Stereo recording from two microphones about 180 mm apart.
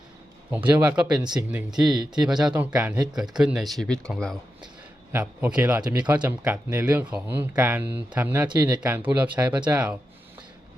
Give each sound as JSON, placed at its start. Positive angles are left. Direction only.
{"t": 0.5, "sound": "speech", "side_deg": -10}
{"t": 5.1, "sound": "speech", "side_deg": -10}
{"t": 5.8, "sound": "speech", "side_deg": -20}
{"t": 6.4, "sound": "speech", "side_deg": -10}
{"t": 8.4, "sound": "speech", "side_deg": -20}
{"t": 8.8, "sound": "speech", "side_deg": -10}
{"t": 9.6, "sound": "speech", "side_deg": -25}